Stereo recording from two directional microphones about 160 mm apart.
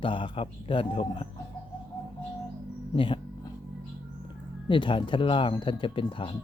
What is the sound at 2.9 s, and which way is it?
Music, 30° left (ahead or behind).